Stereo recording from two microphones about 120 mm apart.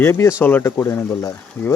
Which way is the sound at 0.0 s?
25° left (ahead or behind).